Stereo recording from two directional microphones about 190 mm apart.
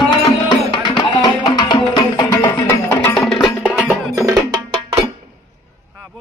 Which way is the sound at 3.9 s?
15° right (ahead or behind).